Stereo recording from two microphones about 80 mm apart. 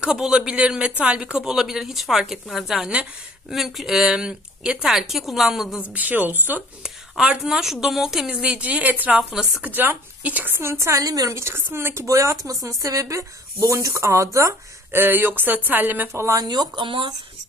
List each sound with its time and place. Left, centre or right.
0.0 s a woman's voice: centre
5.9 s speech: right
6.8 s a woman's voice: centre
8.4 s speech: centre; by 11.3 s right
11.3 s speech: right
14.9 s speech: right
16.1 s speech: right
16.3 s speech: right